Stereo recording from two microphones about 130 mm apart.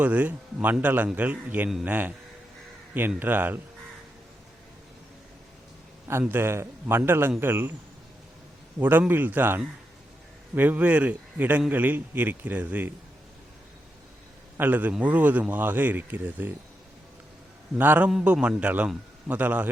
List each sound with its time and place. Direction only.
0.0 s a man's voice: 10° right (ahead or behind)
3.2 s a man's voice: 15° right (ahead or behind)
6.1 s a man's voice: 20° right (ahead or behind)
8.8 s a man's voice: 15° right (ahead or behind)
14.6 s a man's voice: 10° right (ahead or behind)
17.7 s a man's voice: 15° right (ahead or behind)